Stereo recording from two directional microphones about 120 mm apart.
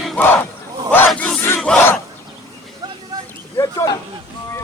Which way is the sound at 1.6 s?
10° left (ahead or behind).